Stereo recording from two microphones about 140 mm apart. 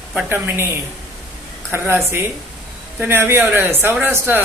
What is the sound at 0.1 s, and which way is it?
Speech, 10° right (ahead or behind).